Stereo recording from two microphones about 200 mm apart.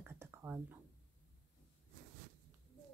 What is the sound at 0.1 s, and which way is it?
Whispering, 10° right (ahead or behind).